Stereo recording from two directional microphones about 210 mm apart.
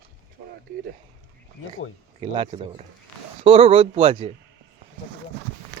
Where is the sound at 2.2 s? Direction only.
25° right (ahead or behind).